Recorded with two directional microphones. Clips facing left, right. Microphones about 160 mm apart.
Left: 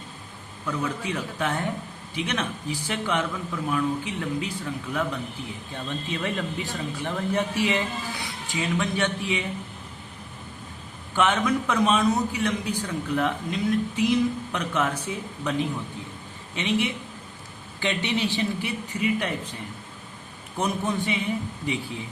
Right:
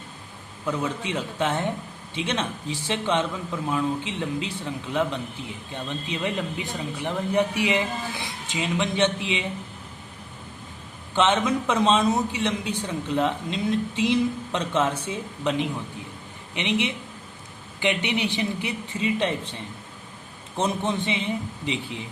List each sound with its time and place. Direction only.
0.6 s a man's voice: 25° right (ahead or behind)
11.1 s a man's voice: 25° right (ahead or behind)
20.6 s a man's voice: 25° right (ahead or behind)